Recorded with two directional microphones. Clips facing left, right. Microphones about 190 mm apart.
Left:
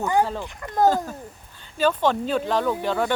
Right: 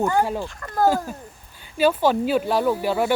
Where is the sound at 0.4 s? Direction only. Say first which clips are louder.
Left 1 dB; 15° left (ahead or behind).